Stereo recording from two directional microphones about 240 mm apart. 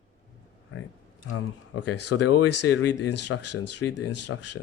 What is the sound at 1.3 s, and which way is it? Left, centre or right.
Speech, left.